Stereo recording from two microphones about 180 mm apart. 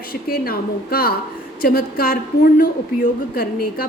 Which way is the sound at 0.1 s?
55° left (ahead or behind).